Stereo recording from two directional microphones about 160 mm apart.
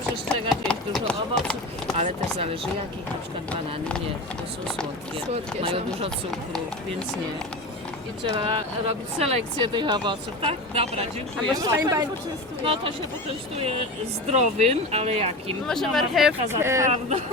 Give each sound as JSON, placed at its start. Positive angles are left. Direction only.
{"t": 0.3, "sound": "chop", "side_deg": 5}
{"t": 2.0, "sound": "speech", "side_deg": -35}
{"t": 5.1, "sound": "speech", "side_deg": -35}
{"t": 8.4, "sound": "speech", "side_deg": -35}
{"t": 11.5, "sound": "speech", "side_deg": -20}
{"t": 12.6, "sound": "speech", "side_deg": -35}
{"t": 14.3, "sound": "speech", "side_deg": -40}
{"t": 15.6, "sound": "speech", "side_deg": 0}
{"t": 16.5, "sound": "speech", "side_deg": -15}
{"t": 16.8, "sound": "speech", "side_deg": -45}